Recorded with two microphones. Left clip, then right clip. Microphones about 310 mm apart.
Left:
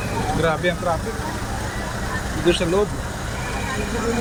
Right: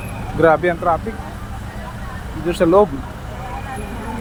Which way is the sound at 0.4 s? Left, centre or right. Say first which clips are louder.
Right 9 dB; centre.